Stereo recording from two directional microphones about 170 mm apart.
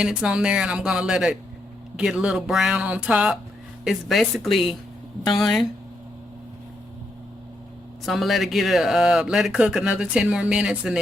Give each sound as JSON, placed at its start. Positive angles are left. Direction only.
{"t": 0.0, "sound": "speech", "side_deg": -5}
{"t": 8.0, "sound": "speech", "side_deg": 0}